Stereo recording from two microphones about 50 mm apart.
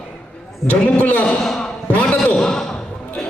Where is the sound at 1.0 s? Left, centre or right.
Left.